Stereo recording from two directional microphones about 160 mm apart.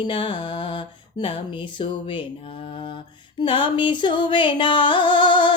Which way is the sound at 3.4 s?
30° left (ahead or behind).